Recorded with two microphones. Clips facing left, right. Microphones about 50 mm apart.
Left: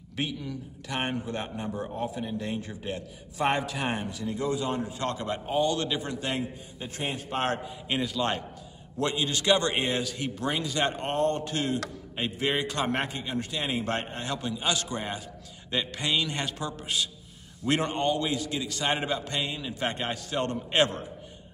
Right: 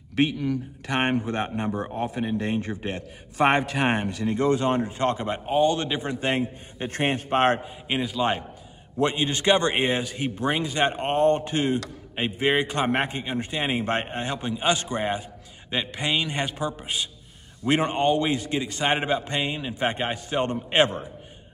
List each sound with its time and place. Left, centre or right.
0.1 s speech: right
6.8 s speech: right
7.9 s a man's voice: centre
8.9 s a man's voice: right